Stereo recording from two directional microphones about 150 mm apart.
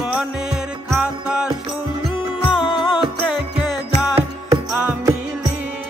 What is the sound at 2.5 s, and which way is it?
Music, 35° left (ahead or behind).